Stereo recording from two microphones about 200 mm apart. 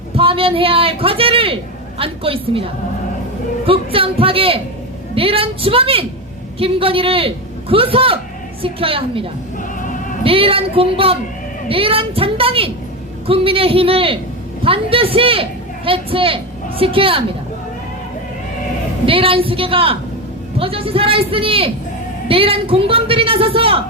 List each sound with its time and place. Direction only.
0.2 s a man's voice: 25° right (ahead or behind)
3.7 s a man's voice: 25° right (ahead or behind)
19.0 s a man's voice: 25° right (ahead or behind)